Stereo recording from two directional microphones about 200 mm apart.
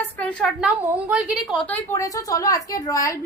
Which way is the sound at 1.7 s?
15° left (ahead or behind).